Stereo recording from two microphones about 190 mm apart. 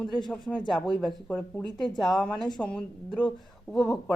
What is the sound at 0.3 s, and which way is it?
Speech, centre (ahead or behind).